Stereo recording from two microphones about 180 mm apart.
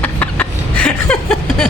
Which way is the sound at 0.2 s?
5° left (ahead or behind).